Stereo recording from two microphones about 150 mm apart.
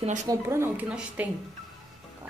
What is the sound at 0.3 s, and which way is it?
Speech, 15° right (ahead or behind).